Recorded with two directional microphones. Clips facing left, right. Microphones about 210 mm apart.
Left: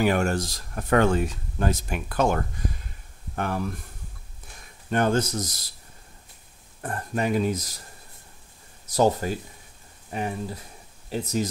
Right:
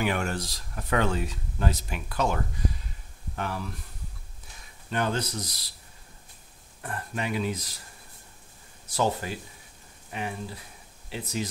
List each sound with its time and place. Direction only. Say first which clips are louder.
0.0 s speech: left 6 dB; 40° left (ahead or behind)
4.8 s speech: left 6 dB; 50° left (ahead or behind)
6.8 s speech: left 6 dB; 45° left (ahead or behind)
8.8 s speech: left 6 dB; 40° left (ahead or behind)